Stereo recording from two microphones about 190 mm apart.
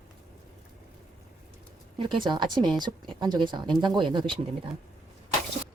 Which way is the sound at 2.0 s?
25° right (ahead or behind).